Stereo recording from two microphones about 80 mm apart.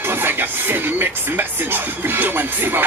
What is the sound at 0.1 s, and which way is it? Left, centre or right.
Speech, right.